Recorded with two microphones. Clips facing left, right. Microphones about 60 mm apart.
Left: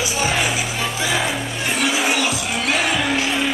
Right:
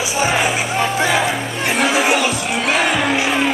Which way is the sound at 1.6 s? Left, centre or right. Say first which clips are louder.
Right 4 dB; right.